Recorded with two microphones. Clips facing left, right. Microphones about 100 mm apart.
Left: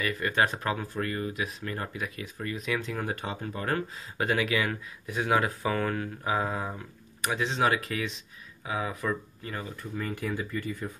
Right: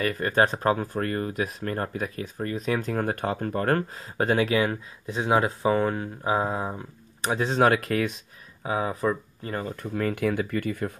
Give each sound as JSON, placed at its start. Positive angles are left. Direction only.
{"t": 0.0, "sound": "speech", "side_deg": -40}
{"t": 7.2, "sound": "speech", "side_deg": -40}
{"t": 8.6, "sound": "speech", "side_deg": -35}
{"t": 9.8, "sound": "speech", "side_deg": -70}